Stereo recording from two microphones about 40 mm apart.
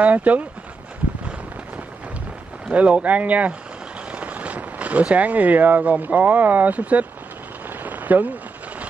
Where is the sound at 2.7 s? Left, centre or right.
Right.